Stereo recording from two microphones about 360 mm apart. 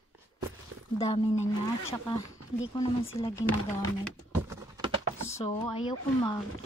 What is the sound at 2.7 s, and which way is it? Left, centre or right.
Speech, centre.